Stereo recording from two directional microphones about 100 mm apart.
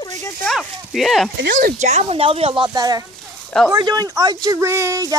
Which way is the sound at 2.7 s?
40° right (ahead or behind).